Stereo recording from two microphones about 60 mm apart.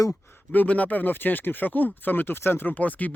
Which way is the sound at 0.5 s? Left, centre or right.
Left.